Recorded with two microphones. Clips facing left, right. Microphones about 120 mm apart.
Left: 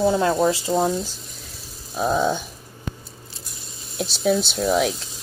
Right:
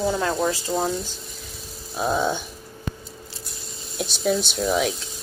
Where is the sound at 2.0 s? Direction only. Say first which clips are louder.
Left 2 dB; centre (ahead or behind).